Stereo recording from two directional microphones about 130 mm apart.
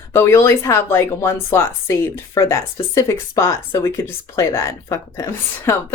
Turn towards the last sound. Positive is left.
turn(degrees=20)  # may be behind; listen again after turning